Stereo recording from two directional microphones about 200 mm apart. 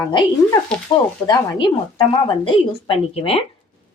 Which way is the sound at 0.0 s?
25° left (ahead or behind).